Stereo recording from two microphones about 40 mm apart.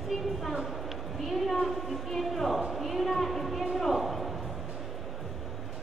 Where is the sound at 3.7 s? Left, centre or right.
Centre.